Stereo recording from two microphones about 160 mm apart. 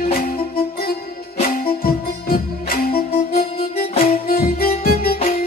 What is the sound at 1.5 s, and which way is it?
Music, 65° left (ahead or behind).